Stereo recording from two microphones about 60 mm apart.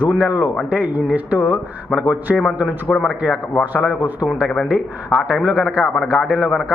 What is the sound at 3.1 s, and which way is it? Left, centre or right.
Speech, centre.